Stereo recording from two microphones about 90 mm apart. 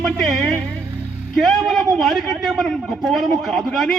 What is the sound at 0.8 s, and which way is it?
Music, 30° right (ahead or behind).